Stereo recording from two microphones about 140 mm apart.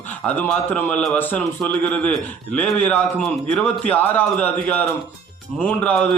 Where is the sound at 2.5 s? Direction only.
10° left (ahead or behind).